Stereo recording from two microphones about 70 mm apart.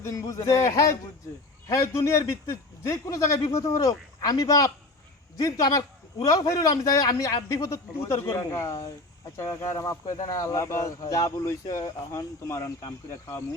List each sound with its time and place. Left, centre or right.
0.0 s a man's voice: left
11.4 s speech: left